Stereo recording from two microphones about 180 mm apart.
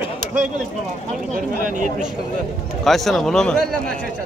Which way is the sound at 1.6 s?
45° right (ahead or behind).